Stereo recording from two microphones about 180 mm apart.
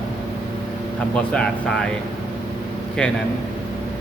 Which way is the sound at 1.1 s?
5° left (ahead or behind).